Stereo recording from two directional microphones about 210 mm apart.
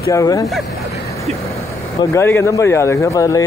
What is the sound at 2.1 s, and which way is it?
A man's voice, 10° left (ahead or behind).